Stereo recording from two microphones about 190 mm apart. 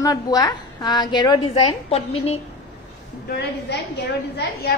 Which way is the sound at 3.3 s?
60° left (ahead or behind).